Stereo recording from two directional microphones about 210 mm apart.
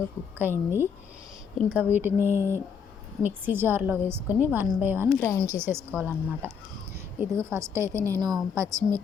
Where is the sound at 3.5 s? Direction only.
10° right (ahead or behind).